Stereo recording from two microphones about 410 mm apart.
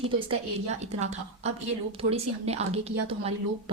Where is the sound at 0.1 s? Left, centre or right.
Centre.